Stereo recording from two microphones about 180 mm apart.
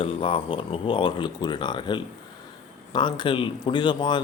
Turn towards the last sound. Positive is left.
turn(degrees=25)  # may be behind; listen again after turning